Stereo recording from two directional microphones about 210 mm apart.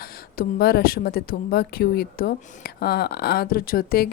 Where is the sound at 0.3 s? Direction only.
45° left (ahead or behind).